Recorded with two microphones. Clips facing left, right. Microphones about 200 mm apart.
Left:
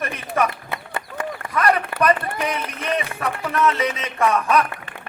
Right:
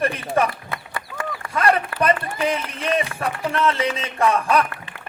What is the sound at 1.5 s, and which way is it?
A man's voice, 30° right (ahead or behind).